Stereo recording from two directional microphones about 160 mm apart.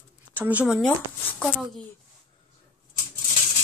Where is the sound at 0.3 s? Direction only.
10° right (ahead or behind).